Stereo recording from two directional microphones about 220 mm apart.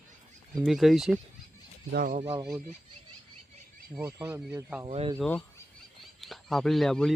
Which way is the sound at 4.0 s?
10° right (ahead or behind).